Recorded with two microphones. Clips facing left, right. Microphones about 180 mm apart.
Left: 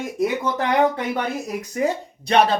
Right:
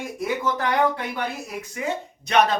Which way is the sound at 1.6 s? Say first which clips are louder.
Left 5 dB; 40° left (ahead or behind).